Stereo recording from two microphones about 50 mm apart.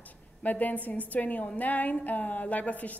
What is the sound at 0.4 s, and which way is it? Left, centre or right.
A woman's voice, left.